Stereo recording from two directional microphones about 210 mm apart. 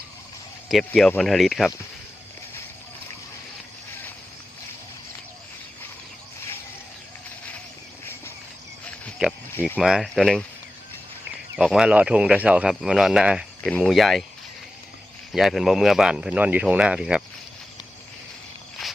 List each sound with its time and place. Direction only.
0.7 s speech: centre (ahead or behind)
9.2 s speech: 5° right (ahead or behind)
11.5 s speech: centre (ahead or behind)
15.3 s speech: centre (ahead or behind)